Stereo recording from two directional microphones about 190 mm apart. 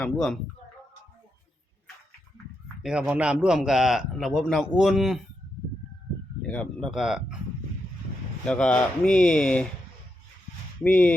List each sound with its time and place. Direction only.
0.0 s a man's voice: centre (ahead or behind)
2.8 s a man's voice: 5° right (ahead or behind)
6.5 s a man's voice: 5° left (ahead or behind)
8.4 s a man's voice: 5° left (ahead or behind)
10.8 s speech: 10° left (ahead or behind)